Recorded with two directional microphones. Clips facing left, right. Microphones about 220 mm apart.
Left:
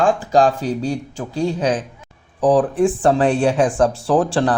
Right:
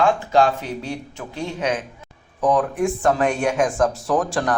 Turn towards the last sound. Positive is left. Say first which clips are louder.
# left 4 dB
turn(degrees=30)  # may be behind; listen again after turning